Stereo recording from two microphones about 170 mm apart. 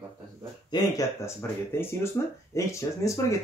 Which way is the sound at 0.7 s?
20° left (ahead or behind).